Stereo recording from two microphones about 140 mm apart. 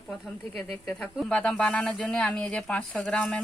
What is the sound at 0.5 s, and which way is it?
Speech, 20° left (ahead or behind).